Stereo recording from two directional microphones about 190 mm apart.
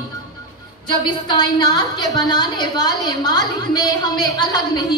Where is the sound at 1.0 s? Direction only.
25° left (ahead or behind).